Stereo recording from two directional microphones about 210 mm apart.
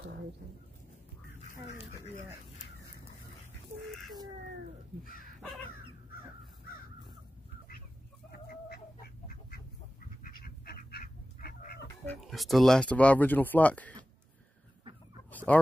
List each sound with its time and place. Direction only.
1.5 s duck: 40° left (ahead or behind)
8.3 s chicken: 50° left (ahead or behind)
10.2 s duck: 45° left (ahead or behind)
12.1 s speech: centre (ahead or behind)
15.3 s fowl: 5° left (ahead or behind)